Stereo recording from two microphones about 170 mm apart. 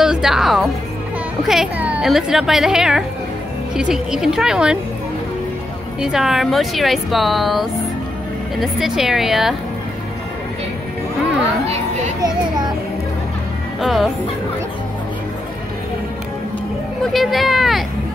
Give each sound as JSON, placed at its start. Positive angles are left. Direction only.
{"t": 0.0, "sound": "music", "side_deg": -5}
{"t": 1.5, "sound": "a woman's voice", "side_deg": -5}
{"t": 5.9, "sound": "a woman's voice", "side_deg": -5}
{"t": 11.6, "sound": "a sound", "side_deg": -35}
{"t": 12.2, "sound": "children playing", "side_deg": -25}
{"t": 13.7, "sound": "a woman's voice", "side_deg": 0}
{"t": 17.0, "sound": "a woman's voice", "side_deg": 0}